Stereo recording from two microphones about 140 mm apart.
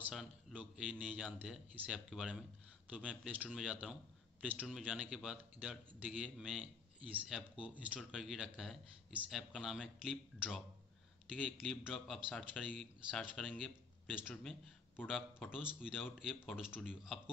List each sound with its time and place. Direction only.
0.1 s a man's voice: centre (ahead or behind)
14.3 s a man's voice: 5° left (ahead or behind)